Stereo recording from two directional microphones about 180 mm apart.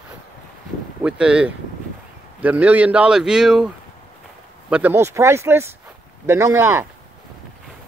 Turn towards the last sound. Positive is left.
turn(degrees=-15)  # may be behind; listen again after turning